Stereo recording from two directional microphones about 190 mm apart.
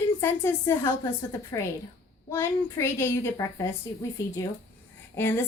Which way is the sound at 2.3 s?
15° left (ahead or behind).